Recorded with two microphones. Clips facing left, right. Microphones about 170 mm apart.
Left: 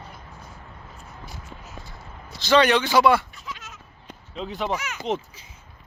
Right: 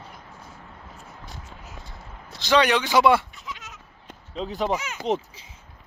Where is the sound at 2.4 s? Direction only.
15° right (ahead or behind).